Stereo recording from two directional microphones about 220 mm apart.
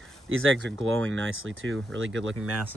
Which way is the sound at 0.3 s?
65° right (ahead or behind).